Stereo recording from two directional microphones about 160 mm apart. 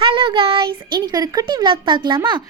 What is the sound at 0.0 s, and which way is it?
A child's voice, 35° right (ahead or behind).